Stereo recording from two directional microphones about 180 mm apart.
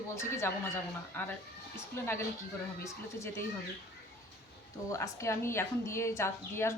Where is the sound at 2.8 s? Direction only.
15° left (ahead or behind).